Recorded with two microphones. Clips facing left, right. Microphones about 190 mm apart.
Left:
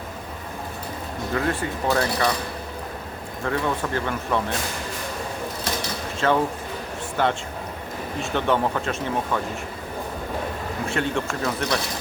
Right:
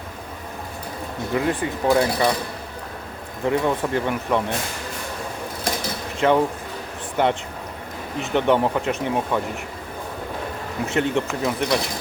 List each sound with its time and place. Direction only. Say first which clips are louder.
1.3 s speech: right 2 dB; 15° right (ahead or behind)
3.4 s speech: right 4 dB; 20° right (ahead or behind)
6.1 s speech: right 3 dB; 15° right (ahead or behind)
10.8 s speech: right 4 dB; 20° right (ahead or behind)